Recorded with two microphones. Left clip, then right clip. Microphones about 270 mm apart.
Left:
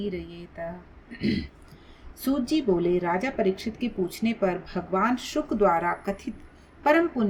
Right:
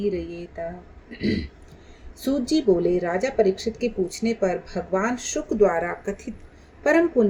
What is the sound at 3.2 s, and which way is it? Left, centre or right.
Speech, left.